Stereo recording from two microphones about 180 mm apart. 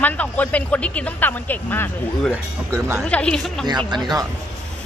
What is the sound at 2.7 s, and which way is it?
Speech, 15° right (ahead or behind).